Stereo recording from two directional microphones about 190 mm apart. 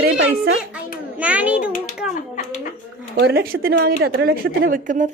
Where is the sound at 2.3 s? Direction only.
45° left (ahead or behind).